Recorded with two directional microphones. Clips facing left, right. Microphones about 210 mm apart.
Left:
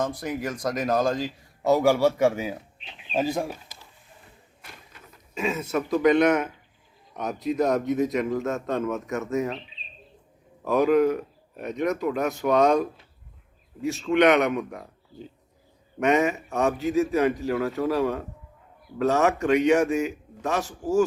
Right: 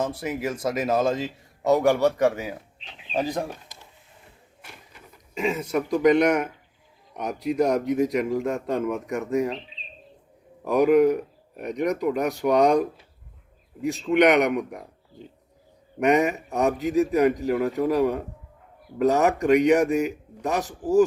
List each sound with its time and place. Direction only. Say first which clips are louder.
0.2 s a man's voice: right 2 dB; 5° right (ahead or behind); by 3.6 s 10° left (ahead or behind)
4.6 s a man's voice: right 1 dB; 10° right (ahead or behind)
10.6 s a man's voice: right 2 dB; 15° right (ahead or behind)
14.1 s a man's voice: right 1 dB; 15° right (ahead or behind)
16.0 s a man's voice: right 1 dB; 15° right (ahead or behind)
16.7 s a man's voice: right 1 dB; 35° right (ahead or behind)
17.6 s a man's voice: right 3 dB; 15° right (ahead or behind)